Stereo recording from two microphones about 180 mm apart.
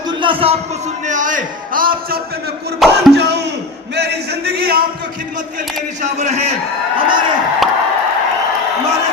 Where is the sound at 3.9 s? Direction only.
65° right (ahead or behind).